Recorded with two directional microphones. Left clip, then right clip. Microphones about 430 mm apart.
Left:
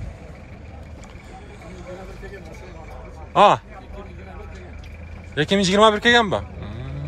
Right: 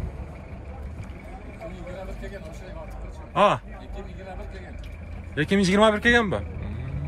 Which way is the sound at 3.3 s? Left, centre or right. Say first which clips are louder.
Left 6 dB; centre.